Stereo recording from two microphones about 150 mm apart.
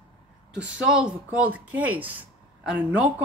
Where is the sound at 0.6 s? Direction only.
10° right (ahead or behind).